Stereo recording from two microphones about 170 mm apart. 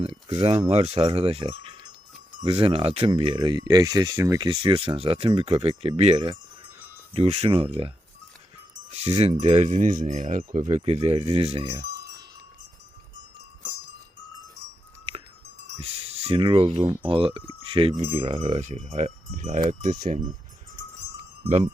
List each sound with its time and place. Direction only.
0.0 s speech: 35° right (ahead or behind)
7.1 s speech: 35° right (ahead or behind)
9.0 s speech: 35° right (ahead or behind)
15.8 s speech: 35° right (ahead or behind)
17.9 s speech: 40° right (ahead or behind)
21.4 s speech: 40° right (ahead or behind)